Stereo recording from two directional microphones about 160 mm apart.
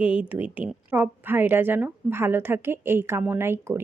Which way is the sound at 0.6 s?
10° right (ahead or behind).